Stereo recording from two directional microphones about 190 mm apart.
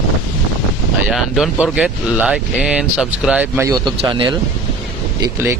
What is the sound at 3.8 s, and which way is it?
Speech, 25° right (ahead or behind).